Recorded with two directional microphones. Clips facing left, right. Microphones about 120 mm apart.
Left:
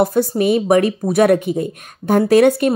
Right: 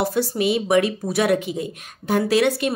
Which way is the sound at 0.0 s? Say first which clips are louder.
Left 6 dB; 45° left (ahead or behind).